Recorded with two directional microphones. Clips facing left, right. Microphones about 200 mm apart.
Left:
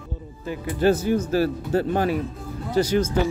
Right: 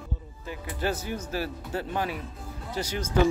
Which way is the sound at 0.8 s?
30° left (ahead or behind).